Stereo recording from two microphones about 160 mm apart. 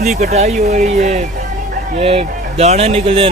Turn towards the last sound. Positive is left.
turn(degrees=-40)  # may be behind; listen again after turning